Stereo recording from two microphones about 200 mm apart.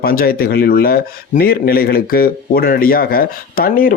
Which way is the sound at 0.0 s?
50° left (ahead or behind).